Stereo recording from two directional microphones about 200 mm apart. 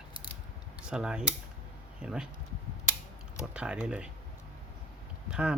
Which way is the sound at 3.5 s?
5° right (ahead or behind).